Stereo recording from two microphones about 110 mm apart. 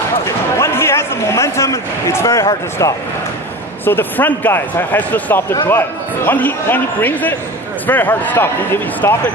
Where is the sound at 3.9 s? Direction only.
20° left (ahead or behind).